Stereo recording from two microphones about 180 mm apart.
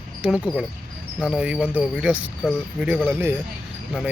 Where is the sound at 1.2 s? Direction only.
5° right (ahead or behind).